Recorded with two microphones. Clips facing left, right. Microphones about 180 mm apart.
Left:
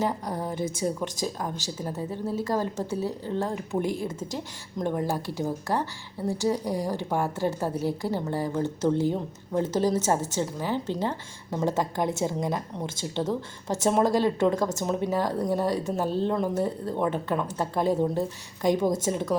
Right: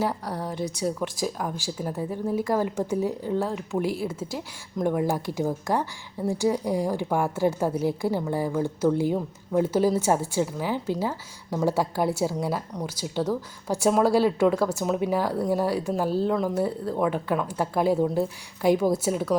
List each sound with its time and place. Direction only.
0.3 s a woman's voice: 20° left (ahead or behind)
0.8 s a woman's voice: centre (ahead or behind)